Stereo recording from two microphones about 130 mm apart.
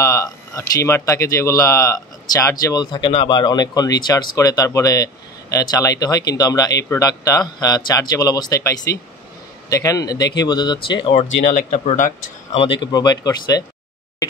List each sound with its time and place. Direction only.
0.0 s speech: 25° left (ahead or behind)
11.1 s speech: 60° left (ahead or behind)
12.5 s speech: 40° left (ahead or behind)